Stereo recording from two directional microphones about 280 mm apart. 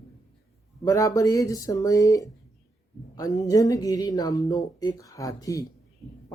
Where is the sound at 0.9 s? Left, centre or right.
Centre.